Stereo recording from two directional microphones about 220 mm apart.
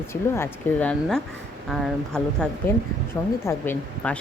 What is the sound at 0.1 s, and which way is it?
Speech, 10° left (ahead or behind).